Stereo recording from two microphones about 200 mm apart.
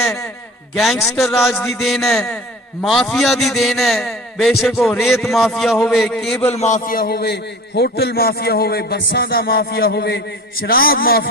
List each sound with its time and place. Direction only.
1.0 s a man's voice: centre (ahead or behind)
6.4 s a man's voice: 30° left (ahead or behind); by 11.3 s 50° left (ahead or behind)